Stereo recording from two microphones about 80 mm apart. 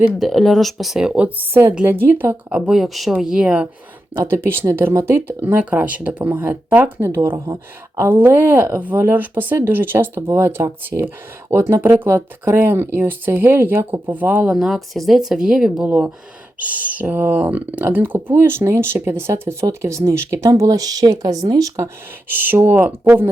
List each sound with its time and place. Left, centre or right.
0.2 s speech: centre; by 2.3 s right
2.5 s speech: centre
4.2 s speech: right
5.5 s speech: centre; by 8.0 s right
8.0 s speech: right; by 14.7 s centre
14.7 s speech: centre
15.9 s speech: right
22.3 s speech: right